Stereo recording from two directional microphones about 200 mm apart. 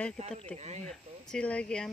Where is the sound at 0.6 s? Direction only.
35° right (ahead or behind).